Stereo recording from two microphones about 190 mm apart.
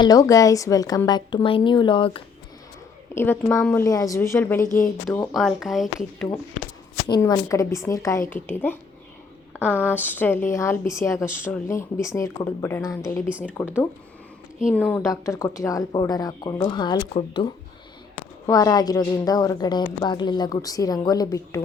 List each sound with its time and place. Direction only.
0.0 s a woman's voice: 20° left (ahead or behind)
3.2 s speech: 10° left (ahead or behind)
5.3 s speech: centre (ahead or behind)
7.1 s speech: 15° left (ahead or behind)
15.1 s a woman's voice: 15° left (ahead or behind)